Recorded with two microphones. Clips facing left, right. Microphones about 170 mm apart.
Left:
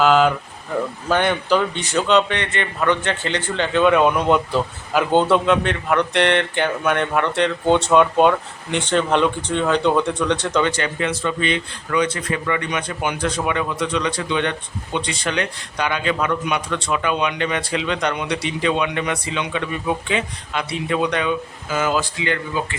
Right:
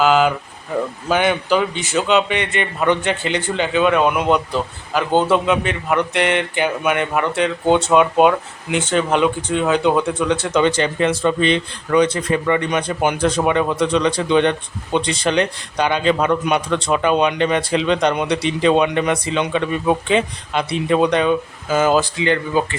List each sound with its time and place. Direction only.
0.0 s a man's voice: 5° right (ahead or behind)
10.6 s speech: 25° right (ahead or behind)